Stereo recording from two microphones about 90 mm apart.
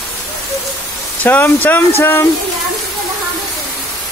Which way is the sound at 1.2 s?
20° left (ahead or behind).